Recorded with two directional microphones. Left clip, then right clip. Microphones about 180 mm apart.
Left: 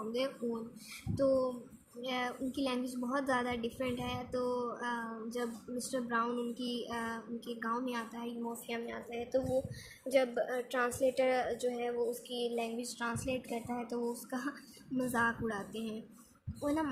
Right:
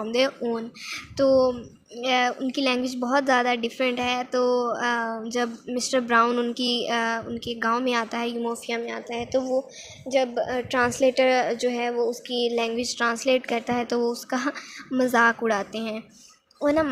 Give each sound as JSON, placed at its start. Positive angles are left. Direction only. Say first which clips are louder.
{"t": 0.9, "sound": "a woman's voice", "louder": "right 11 dB", "side_deg": -35}
{"t": 8.6, "sound": "a woman's voice", "louder": "right 11 dB", "side_deg": -25}